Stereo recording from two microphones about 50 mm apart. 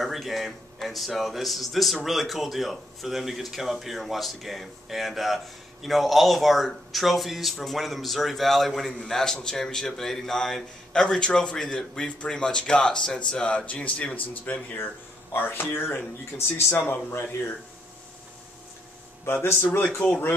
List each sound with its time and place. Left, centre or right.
0.0 s speech: centre; by 14.8 s left
16.7 s speech: left
19.2 s speech: left